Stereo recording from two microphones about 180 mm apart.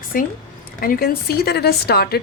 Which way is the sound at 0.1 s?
50° left (ahead or behind).